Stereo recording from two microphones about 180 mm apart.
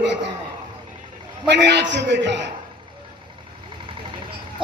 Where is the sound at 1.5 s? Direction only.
70° right (ahead or behind).